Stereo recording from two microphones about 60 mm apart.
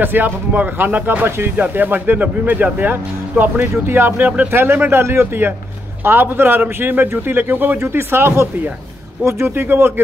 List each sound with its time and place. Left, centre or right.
0.0 s speech: right